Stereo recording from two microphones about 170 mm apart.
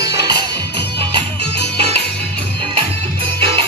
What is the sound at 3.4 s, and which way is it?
Music, 30° right (ahead or behind).